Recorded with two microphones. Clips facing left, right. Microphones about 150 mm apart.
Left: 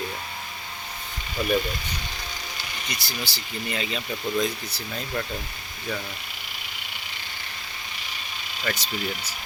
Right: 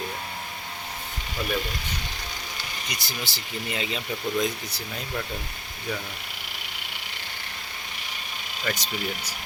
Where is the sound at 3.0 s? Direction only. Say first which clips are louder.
Left 1 dB; 20° right (ahead or behind).